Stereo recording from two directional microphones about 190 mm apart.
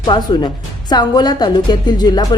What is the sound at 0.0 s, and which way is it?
A woman's voice, 20° left (ahead or behind).